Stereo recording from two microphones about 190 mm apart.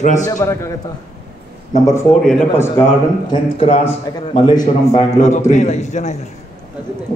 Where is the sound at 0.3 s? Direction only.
15° left (ahead or behind).